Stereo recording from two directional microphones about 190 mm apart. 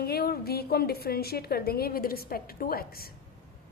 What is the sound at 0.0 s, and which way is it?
A woman's voice, 55° left (ahead or behind).